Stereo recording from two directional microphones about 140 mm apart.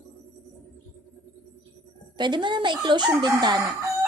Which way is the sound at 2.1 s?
35° right (ahead or behind).